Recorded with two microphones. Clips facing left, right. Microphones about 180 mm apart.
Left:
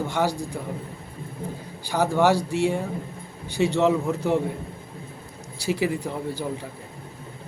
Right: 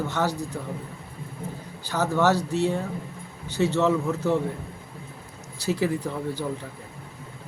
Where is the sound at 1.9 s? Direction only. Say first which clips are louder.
Left 2 dB; 10° left (ahead or behind).